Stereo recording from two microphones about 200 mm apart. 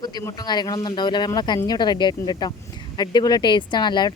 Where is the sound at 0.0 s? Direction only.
20° left (ahead or behind).